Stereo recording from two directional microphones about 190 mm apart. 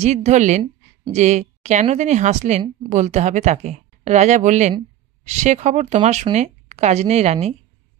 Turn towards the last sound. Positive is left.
turn(degrees=-35)  # may be behind; listen again after turning